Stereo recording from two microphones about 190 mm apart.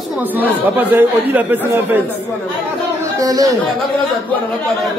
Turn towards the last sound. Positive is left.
turn(degrees=-20)  # may be behind; listen again after turning